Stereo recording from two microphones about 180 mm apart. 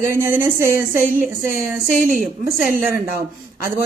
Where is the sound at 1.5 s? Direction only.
45° right (ahead or behind).